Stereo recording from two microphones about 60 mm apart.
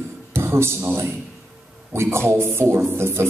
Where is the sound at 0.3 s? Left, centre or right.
Right.